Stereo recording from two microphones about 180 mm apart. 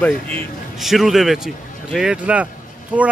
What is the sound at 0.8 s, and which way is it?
Speech, centre (ahead or behind).